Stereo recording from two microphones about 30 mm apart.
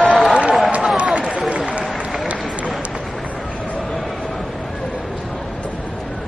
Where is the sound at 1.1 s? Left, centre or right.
Right.